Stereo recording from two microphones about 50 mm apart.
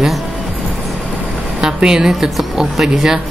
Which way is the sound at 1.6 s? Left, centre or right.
Centre.